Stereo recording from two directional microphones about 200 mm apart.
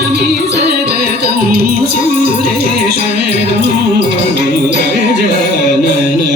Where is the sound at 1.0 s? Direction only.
50° right (ahead or behind).